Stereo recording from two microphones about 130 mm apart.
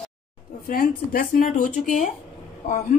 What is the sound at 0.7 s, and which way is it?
A man's voice, 90° left.